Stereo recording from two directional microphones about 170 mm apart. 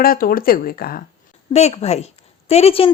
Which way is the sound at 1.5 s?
40° left (ahead or behind).